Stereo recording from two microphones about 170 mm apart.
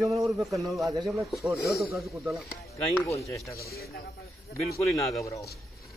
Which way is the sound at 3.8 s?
65° left (ahead or behind).